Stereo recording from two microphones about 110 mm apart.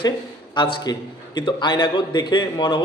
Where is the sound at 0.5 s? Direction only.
45° left (ahead or behind).